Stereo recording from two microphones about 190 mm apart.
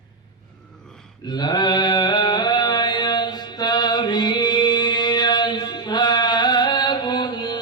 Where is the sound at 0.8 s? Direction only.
5° left (ahead or behind).